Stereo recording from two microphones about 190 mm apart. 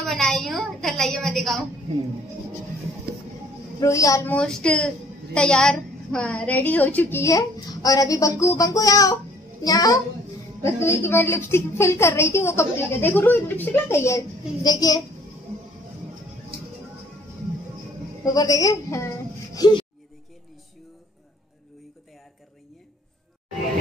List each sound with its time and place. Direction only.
0.0 s a woman's voice: centre (ahead or behind)
3.8 s a woman's voice: 15° left (ahead or behind)
4.4 s a woman's voice: 5° left (ahead or behind)
18.2 s a woman's voice: 20° left (ahead or behind)